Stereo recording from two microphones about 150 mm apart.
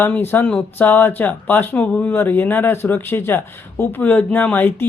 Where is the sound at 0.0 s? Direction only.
15° left (ahead or behind).